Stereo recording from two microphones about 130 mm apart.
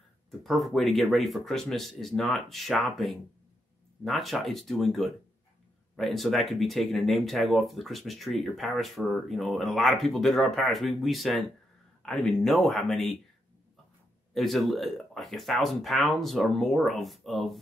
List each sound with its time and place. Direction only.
0.3 s speech: centre (ahead or behind)
14.3 s speech: centre (ahead or behind)